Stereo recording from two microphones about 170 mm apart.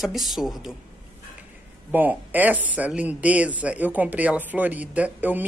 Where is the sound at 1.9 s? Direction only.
10° right (ahead or behind).